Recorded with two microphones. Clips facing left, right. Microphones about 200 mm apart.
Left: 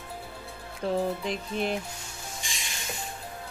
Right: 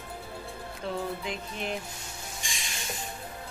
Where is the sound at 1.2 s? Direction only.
35° left (ahead or behind).